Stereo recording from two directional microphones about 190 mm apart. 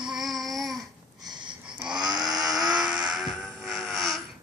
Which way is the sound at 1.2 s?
25° right (ahead or behind).